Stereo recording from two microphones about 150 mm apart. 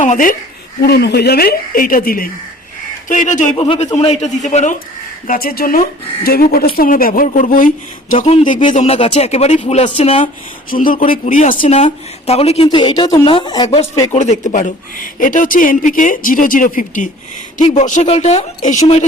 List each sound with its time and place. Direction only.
0.0 s a woman's voice: 60° left (ahead or behind)
0.8 s speech: 90° left; by 2.3 s 75° left (ahead or behind)
3.1 s a woman's voice: 60° left (ahead or behind)
3.5 s speech: 40° left (ahead or behind); by 4.8 s 55° left (ahead or behind)
5.3 s speech: 80° left
6.2 s speech: 90° left
6.7 s speech: 70° left (ahead or behind)
8.1 s speech: 50° left (ahead or behind)
10.7 s a woman's voice: 65° left (ahead or behind)
11.5 s speech: 40° left (ahead or behind)
12.6 s speech: 30° left (ahead or behind)
14.1 s a woman's voice: 50° left (ahead or behind)